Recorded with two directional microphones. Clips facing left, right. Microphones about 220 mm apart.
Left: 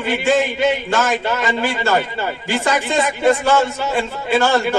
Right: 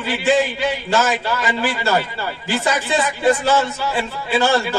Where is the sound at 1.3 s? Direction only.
20° left (ahead or behind).